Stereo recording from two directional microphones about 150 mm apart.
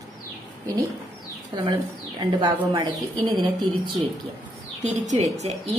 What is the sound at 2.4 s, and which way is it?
A woman's voice, 25° right (ahead or behind).